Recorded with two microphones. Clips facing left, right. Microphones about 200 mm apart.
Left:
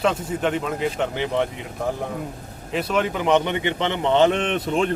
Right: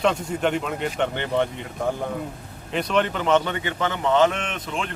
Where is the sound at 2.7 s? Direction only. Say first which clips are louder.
Even; 5° left (ahead or behind); by 4.9 s 40° left (ahead or behind).